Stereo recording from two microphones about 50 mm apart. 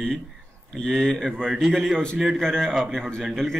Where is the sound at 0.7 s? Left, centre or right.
Centre.